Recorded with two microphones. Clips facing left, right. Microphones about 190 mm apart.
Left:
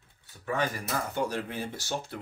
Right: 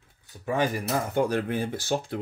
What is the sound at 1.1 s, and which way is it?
Speech, 55° right (ahead or behind).